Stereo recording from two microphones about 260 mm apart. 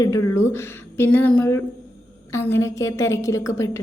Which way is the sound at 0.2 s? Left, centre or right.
Left.